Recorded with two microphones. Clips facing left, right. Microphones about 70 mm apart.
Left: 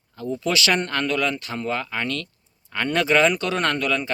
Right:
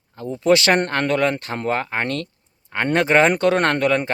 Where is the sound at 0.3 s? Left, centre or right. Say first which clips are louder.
Right 7 dB; right.